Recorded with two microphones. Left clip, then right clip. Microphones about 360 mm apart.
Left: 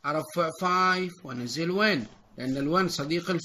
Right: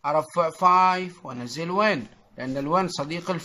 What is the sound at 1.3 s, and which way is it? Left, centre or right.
A man's voice, centre.